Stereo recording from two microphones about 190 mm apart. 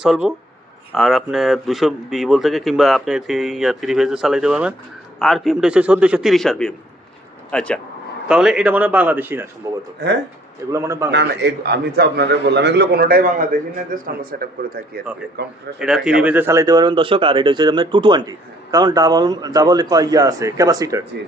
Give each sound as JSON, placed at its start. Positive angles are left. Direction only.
{"t": 0.0, "sound": "a man's voice", "side_deg": -5}
{"t": 10.0, "sound": "a man's voice", "side_deg": -65}
{"t": 10.7, "sound": "a man's voice", "side_deg": -15}
{"t": 11.1, "sound": "a man's voice", "side_deg": -60}
{"t": 15.8, "sound": "speech", "side_deg": -5}